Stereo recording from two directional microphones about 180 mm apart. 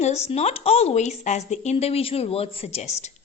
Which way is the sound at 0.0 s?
35° left (ahead or behind).